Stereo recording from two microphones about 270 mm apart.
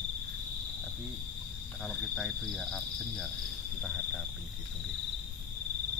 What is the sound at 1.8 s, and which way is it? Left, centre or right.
Speech, centre.